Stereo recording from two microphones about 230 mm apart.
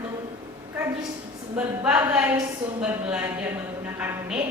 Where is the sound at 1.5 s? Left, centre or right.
Centre.